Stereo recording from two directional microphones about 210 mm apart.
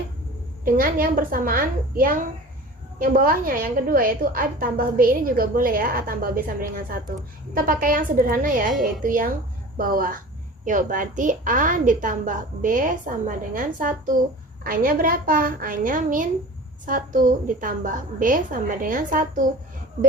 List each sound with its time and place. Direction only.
0.6 s a woman's voice: 40° right (ahead or behind)